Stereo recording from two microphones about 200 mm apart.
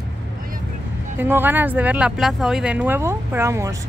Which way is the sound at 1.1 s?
10° right (ahead or behind).